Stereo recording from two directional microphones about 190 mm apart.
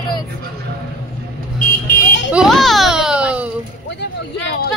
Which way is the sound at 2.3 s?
Centre (ahead or behind).